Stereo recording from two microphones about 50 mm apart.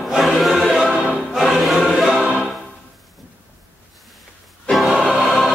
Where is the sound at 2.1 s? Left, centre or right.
Right.